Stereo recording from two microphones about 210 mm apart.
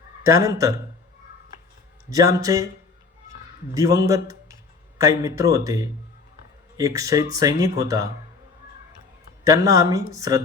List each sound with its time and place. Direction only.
0.3 s speech: 15° right (ahead or behind)
2.0 s speech: 15° right (ahead or behind)
3.8 s a man's voice: 15° right (ahead or behind)
9.4 s speech: 15° right (ahead or behind)